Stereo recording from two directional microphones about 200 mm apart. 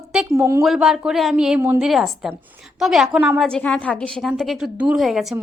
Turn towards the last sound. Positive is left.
turn(degrees=0)  # may be behind; listen again after turning